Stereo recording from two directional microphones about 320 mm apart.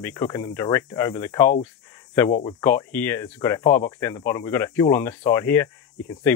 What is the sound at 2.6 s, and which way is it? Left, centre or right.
Speech, centre.